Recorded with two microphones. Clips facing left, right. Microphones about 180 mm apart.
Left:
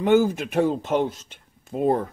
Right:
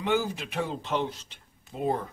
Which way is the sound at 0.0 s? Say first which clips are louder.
Left 9 dB; 50° left (ahead or behind).